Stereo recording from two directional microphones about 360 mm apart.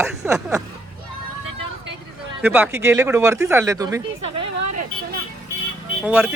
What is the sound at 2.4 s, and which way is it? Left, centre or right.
Speech, centre.